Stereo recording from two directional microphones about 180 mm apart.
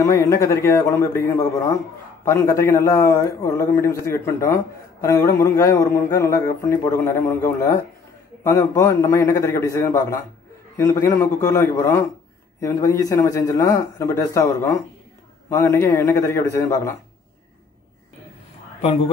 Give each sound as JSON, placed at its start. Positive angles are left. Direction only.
{"t": 0.0, "sound": "a man's voice", "side_deg": 15}